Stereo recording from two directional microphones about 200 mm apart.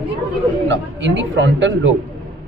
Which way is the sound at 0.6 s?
65° right (ahead or behind).